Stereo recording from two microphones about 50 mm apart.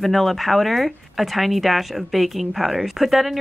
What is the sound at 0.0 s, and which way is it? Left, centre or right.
Speech, centre.